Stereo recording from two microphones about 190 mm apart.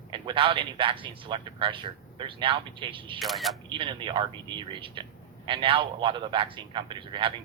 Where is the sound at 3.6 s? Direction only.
25° right (ahead or behind).